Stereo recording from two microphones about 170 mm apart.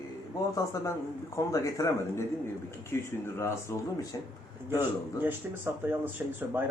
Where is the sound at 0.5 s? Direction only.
20° left (ahead or behind).